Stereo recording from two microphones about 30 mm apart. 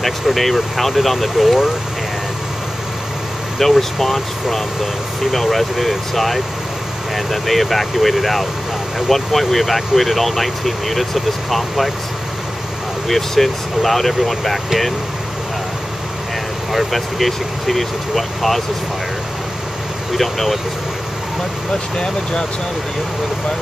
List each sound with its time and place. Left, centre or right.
0.0 s speech: centre
3.6 s speech: centre
13.1 s speech: centre
16.7 s speech: centre
20.1 s speech: centre
21.9 s speech: left